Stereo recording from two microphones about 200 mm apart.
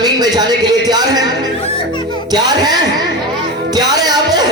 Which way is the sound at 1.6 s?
25° left (ahead or behind).